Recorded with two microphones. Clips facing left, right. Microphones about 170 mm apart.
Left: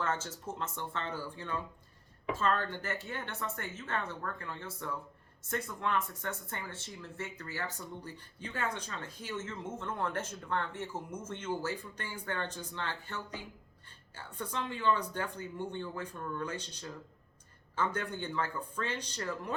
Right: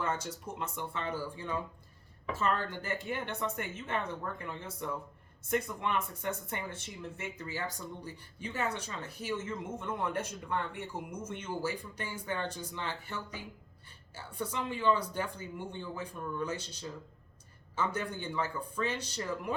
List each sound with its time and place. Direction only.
0.0 s speech: 15° right (ahead or behind)
17.7 s speech: 10° right (ahead or behind)